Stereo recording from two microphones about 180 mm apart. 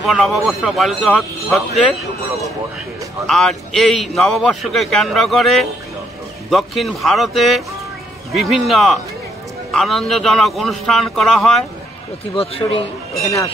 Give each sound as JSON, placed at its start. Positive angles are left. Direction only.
{"t": 0.0, "sound": "a man's voice", "side_deg": 0}
{"t": 3.3, "sound": "a man's voice", "side_deg": 0}
{"t": 12.4, "sound": "speech", "side_deg": 30}
{"t": 13.2, "sound": "speech", "side_deg": 15}